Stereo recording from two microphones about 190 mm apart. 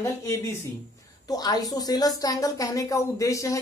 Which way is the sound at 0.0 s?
15° left (ahead or behind).